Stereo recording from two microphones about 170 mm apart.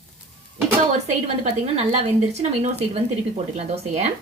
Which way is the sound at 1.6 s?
40° right (ahead or behind).